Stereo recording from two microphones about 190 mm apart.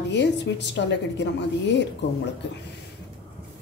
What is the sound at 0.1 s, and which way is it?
A woman's voice, 65° left (ahead or behind).